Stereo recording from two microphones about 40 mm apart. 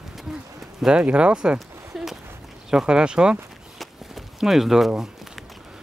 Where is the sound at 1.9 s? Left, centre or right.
Centre.